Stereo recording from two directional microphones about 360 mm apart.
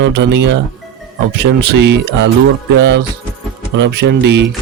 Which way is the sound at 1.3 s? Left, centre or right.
Right.